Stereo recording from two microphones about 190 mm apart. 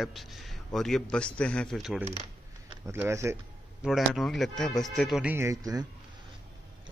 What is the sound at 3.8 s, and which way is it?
A man's voice, centre (ahead or behind).